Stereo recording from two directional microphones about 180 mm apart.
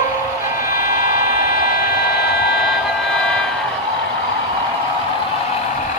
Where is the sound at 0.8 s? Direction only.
50° left (ahead or behind).